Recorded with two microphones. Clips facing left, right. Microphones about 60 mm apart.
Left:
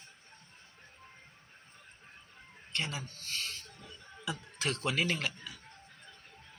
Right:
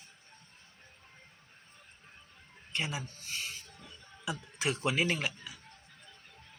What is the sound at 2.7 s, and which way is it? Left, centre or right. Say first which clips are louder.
Speech: right 1 dB; centre.